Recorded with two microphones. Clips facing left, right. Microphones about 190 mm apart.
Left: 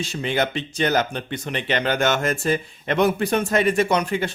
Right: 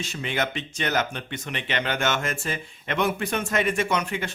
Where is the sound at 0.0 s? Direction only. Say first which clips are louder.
Left 5 dB; 35° left (ahead or behind).